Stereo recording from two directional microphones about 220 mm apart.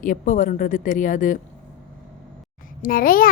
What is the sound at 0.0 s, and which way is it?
A child's voice, 35° left (ahead or behind).